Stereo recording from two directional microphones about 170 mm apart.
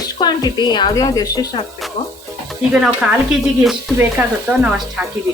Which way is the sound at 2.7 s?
5° right (ahead or behind).